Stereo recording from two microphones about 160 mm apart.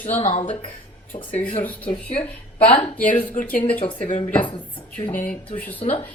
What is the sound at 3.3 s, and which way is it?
Speech, 55° left (ahead or behind).